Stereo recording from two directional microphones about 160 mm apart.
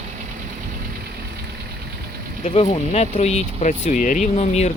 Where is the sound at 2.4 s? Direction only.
40° left (ahead or behind).